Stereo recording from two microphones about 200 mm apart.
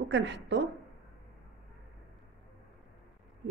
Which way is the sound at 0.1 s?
60° right (ahead or behind).